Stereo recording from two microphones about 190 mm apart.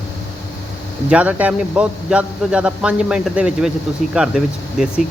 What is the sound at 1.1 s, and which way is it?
A man's voice, 5° right (ahead or behind).